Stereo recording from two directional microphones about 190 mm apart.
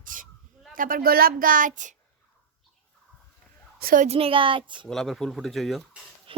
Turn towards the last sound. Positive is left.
turn(degrees=0)  # may be behind; listen again after turning